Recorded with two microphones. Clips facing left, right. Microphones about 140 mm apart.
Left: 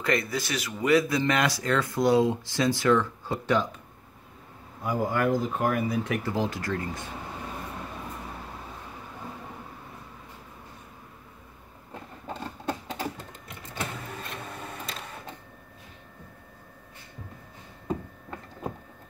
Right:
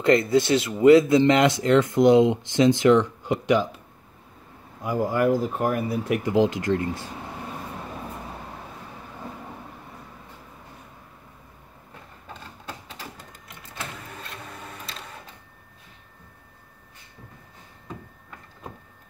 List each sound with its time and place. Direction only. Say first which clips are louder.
0.0 s speech: right 9 dB; 25° right (ahead or behind)
4.8 s speech: right 4 dB; 5° right (ahead or behind)